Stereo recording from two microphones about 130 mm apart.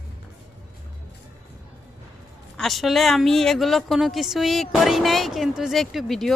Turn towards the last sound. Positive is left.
turn(degrees=0)  # may be behind; listen again after turning